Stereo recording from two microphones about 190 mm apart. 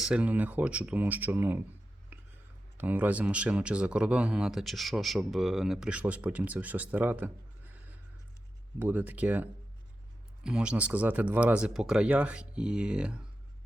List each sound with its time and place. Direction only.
0.0 s speech: 5° right (ahead or behind)
2.1 s a sound: 10° right (ahead or behind)
2.7 s speech: 10° right (ahead or behind)
8.8 s speech: 10° right (ahead or behind)